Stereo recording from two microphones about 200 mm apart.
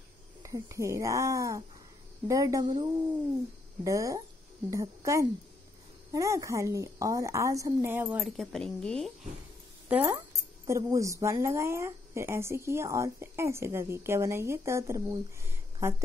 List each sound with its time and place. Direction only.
0.4 s a woman's voice: 15° right (ahead or behind); by 9.1 s 5° left (ahead or behind)
9.8 s a woman's voice: 10° right (ahead or behind)